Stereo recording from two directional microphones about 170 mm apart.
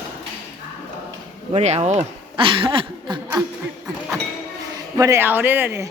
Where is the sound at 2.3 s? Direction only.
30° right (ahead or behind).